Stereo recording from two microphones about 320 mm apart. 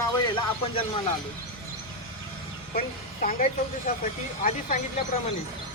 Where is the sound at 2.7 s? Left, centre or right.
Left.